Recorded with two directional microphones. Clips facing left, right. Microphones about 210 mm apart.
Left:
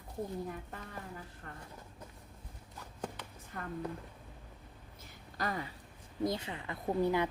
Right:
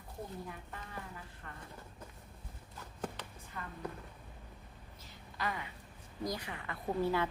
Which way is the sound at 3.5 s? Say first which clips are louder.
Left 3 dB; 45° left (ahead or behind).